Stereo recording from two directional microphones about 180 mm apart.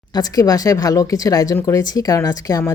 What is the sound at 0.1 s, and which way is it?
Speech, 20° left (ahead or behind).